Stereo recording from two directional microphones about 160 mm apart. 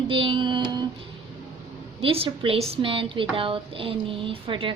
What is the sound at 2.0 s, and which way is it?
Speech, 35° right (ahead or behind).